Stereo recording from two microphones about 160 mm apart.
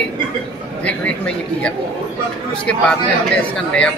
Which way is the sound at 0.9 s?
5° left (ahead or behind).